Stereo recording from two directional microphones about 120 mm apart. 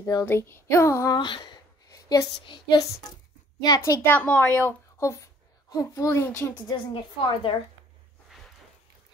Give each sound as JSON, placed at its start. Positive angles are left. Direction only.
{"t": 0.0, "sound": "a child's voice", "side_deg": 25}
{"t": 1.1, "sound": "a sound", "side_deg": 40}
{"t": 4.0, "sound": "a woman's voice", "side_deg": 15}
{"t": 6.5, "sound": "a woman's voice", "side_deg": 45}